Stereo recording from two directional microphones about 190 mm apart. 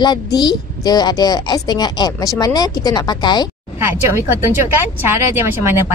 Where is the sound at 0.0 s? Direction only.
20° left (ahead or behind).